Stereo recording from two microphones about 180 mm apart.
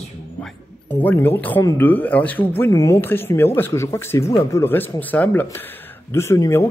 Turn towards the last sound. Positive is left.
turn(degrees=15)  # may be behind; listen again after turning